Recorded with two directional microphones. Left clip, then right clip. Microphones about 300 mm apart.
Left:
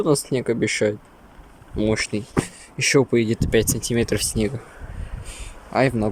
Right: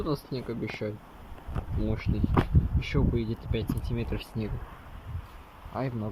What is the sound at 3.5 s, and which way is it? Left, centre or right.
Speech, left.